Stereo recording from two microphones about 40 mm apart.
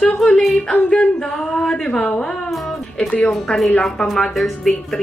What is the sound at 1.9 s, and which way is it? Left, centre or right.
Speech, left.